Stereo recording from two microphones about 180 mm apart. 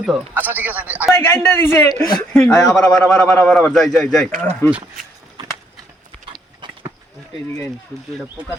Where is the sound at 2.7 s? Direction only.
5° left (ahead or behind).